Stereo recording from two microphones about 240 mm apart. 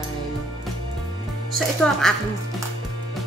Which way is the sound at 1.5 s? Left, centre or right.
Centre.